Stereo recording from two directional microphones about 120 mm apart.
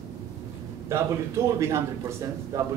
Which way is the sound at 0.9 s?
25° right (ahead or behind).